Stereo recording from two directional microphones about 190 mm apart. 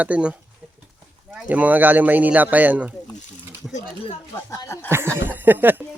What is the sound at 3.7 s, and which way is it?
Speech, 35° left (ahead or behind).